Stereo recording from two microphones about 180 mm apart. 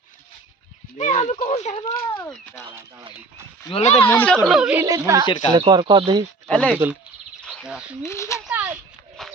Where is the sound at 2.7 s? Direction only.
15° right (ahead or behind).